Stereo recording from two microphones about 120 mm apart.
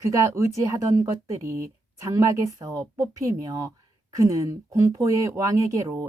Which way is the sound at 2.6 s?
30° right (ahead or behind).